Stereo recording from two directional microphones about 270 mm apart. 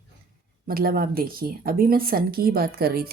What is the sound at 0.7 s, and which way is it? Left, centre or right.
Speech, right.